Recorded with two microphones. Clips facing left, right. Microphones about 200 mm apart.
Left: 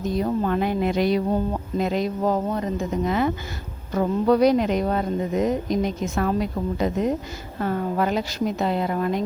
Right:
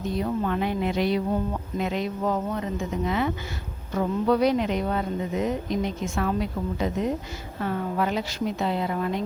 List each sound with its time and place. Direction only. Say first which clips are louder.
0.2 s a woman's voice: left 3 dB; 40° left (ahead or behind)